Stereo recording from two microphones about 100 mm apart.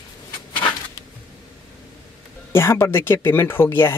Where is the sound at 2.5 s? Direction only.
25° left (ahead or behind).